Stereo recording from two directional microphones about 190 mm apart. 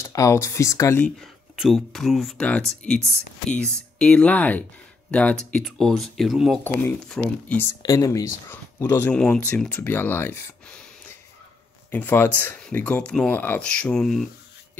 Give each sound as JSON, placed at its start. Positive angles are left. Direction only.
{"t": 0.0, "sound": "speech", "side_deg": 15}
{"t": 1.2, "sound": "speech", "side_deg": 0}
{"t": 6.6, "sound": "speech", "side_deg": 10}
{"t": 7.8, "sound": "speech", "side_deg": 20}
{"t": 11.9, "sound": "speech", "side_deg": 10}